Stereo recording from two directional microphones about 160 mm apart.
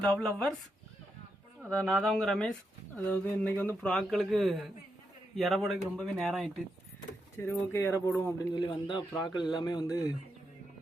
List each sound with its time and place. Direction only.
0.2 s speech: 5° left (ahead or behind)
1.7 s speech: centre (ahead or behind)
7.3 s speech: 15° left (ahead or behind)
8.5 s speech: 30° left (ahead or behind)